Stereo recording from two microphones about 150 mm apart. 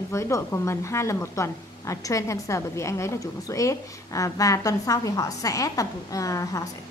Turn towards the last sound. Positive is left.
turn(degrees=20)  # may be behind; listen again after turning